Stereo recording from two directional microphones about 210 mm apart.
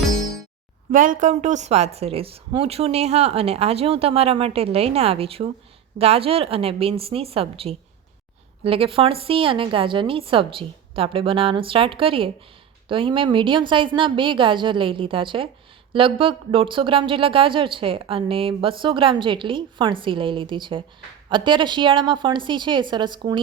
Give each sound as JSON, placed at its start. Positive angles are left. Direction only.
{"t": 0.9, "sound": "speech", "side_deg": -40}